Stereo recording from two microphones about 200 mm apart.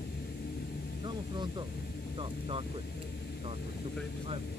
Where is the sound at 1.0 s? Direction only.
20° right (ahead or behind).